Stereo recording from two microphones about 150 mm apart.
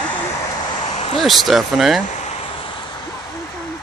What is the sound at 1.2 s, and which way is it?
Speech, centre (ahead or behind).